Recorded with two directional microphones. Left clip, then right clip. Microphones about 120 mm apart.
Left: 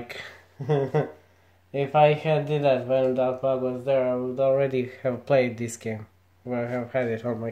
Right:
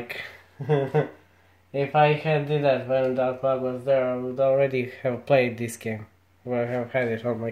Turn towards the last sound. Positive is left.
turn(degrees=-5)  # may be behind; listen again after turning